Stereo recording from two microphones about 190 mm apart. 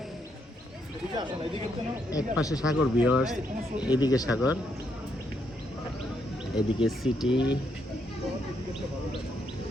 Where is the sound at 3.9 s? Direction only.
20° left (ahead or behind).